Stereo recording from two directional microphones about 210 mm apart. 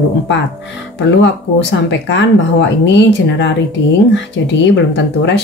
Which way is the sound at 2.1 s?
60° left (ahead or behind).